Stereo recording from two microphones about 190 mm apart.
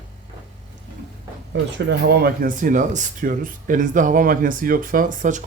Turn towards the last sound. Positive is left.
turn(degrees=-40)  # may be behind; listen again after turning